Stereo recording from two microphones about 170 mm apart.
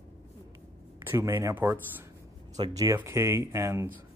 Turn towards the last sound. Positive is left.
turn(degrees=-15)  # may be behind; listen again after turning